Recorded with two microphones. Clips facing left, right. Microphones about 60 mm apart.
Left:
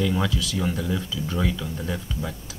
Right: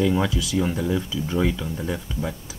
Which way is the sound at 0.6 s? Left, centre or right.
Centre.